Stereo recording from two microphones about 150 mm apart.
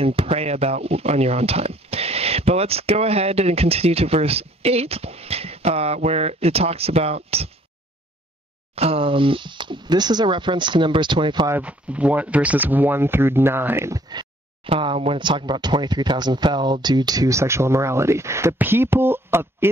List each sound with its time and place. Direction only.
0.0 s speech: 40° right (ahead or behind)
8.7 s speech: 40° right (ahead or behind)
11.4 s speech: 10° right (ahead or behind)
14.7 s speech: 40° right (ahead or behind); by 19.7 s 15° right (ahead or behind)